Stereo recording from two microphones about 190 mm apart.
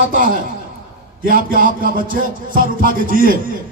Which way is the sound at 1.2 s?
50° right (ahead or behind).